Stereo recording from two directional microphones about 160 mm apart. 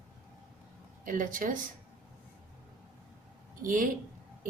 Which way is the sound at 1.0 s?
55° right (ahead or behind).